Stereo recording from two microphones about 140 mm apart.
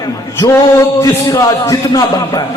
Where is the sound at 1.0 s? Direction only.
25° left (ahead or behind).